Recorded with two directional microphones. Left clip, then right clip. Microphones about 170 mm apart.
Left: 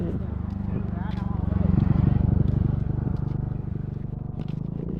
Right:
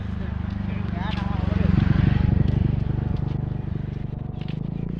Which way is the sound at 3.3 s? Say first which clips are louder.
Right 2 dB; 15° left (ahead or behind).